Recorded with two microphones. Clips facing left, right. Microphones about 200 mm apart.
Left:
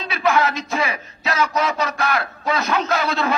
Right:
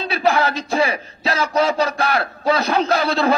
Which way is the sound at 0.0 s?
30° right (ahead or behind).